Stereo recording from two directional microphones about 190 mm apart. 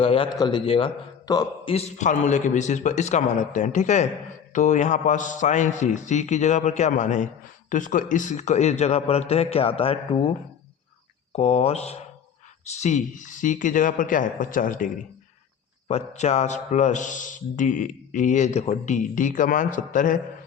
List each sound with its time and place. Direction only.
0.0 s a man's voice: 30° left (ahead or behind)
1.7 s a man's voice: 40° left (ahead or behind)